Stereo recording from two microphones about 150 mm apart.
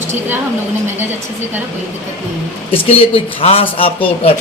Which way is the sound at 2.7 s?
40° left (ahead or behind).